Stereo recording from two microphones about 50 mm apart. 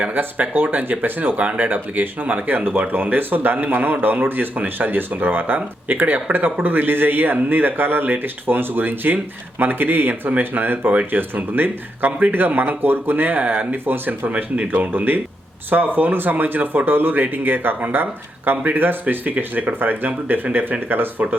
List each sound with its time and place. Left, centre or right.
0.0 s speech: right
14.3 s speech: right